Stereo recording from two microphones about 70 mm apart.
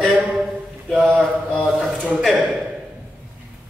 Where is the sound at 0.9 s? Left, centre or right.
Centre.